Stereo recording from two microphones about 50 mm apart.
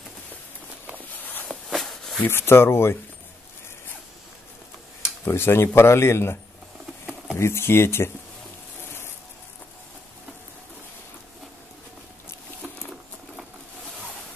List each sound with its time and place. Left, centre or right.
1.1 s a sound: left
1.5 s a sound: centre
2.2 s speech: left
5.2 s speech: left
7.3 s speech: left
12.6 s patter: right